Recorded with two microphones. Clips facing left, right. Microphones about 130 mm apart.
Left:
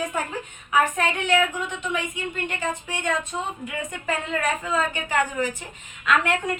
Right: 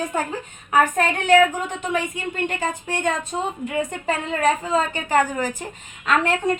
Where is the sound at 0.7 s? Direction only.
40° right (ahead or behind).